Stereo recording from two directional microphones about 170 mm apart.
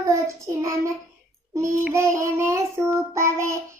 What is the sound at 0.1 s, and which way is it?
Child singing, 15° right (ahead or behind).